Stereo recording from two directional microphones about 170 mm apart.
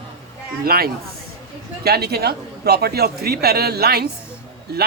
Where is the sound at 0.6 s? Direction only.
60° right (ahead or behind).